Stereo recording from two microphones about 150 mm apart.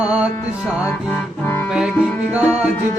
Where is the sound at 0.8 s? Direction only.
20° left (ahead or behind).